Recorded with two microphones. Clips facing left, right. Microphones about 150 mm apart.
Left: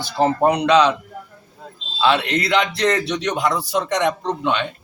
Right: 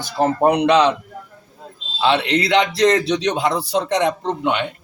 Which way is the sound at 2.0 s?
30° right (ahead or behind).